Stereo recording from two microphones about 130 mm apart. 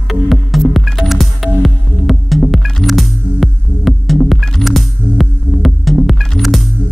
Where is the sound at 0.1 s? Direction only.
Centre (ahead or behind).